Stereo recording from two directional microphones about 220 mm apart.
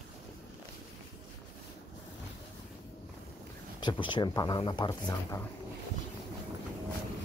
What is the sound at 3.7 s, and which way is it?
Speech, 20° left (ahead or behind).